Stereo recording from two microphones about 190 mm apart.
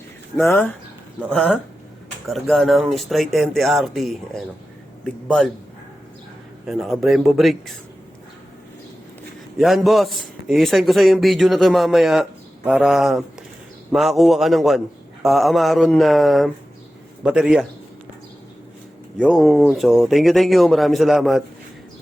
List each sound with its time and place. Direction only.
0.4 s a man's voice: 10° left (ahead or behind)
6.7 s a man's voice: centre (ahead or behind)
9.6 s a man's voice: centre (ahead or behind)
19.2 s a man's voice: centre (ahead or behind)